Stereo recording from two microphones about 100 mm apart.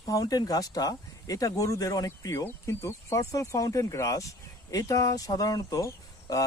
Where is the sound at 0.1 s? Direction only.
40° left (ahead or behind).